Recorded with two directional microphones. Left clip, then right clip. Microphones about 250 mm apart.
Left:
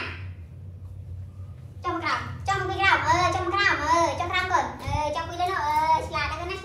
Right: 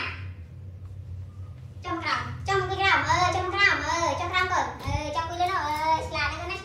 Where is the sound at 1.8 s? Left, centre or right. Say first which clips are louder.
Left 1 dB; centre.